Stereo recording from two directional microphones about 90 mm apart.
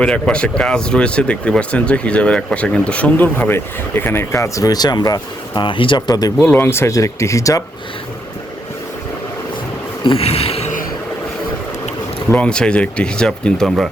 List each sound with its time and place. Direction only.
0.0 s speech: 10° left (ahead or behind); by 5.6 s 50° left (ahead or behind)
5.6 s speech: 70° left (ahead or behind)
6.4 s speech: 20° left (ahead or behind); by 7.6 s 35° left (ahead or behind)
10.0 s insect: 85° left
12.3 s speech: 15° left (ahead or behind)